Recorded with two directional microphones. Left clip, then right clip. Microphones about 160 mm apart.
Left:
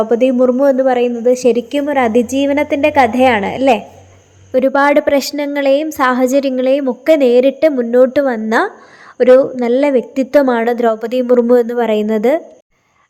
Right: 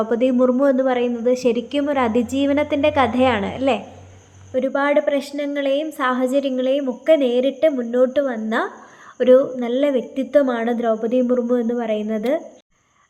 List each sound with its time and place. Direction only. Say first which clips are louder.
0.0 s a woman's voice: left 6 dB; 30° left (ahead or behind)
4.5 s a woman's voice: left 7 dB; 55° left (ahead or behind)